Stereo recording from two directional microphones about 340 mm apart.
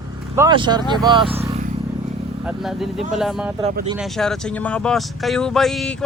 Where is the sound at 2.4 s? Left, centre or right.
Centre.